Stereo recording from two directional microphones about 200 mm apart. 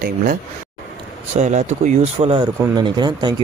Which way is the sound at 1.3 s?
35° right (ahead or behind).